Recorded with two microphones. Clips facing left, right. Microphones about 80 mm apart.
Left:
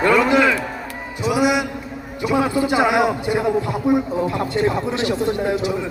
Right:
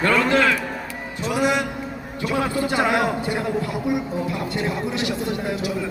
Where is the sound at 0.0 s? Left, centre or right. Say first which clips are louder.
Left 3 dB; centre.